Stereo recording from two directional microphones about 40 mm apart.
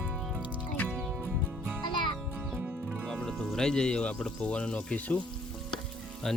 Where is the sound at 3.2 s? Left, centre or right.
Centre; by 5.2 s left.